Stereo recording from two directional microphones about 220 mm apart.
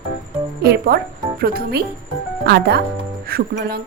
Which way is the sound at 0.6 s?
45° right (ahead or behind).